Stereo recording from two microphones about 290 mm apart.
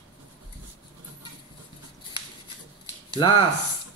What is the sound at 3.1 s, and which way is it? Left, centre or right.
Speech, centre.